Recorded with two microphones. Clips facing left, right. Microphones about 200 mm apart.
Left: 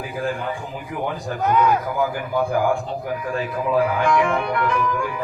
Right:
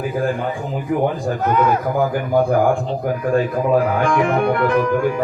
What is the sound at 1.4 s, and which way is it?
Speech, centre (ahead or behind).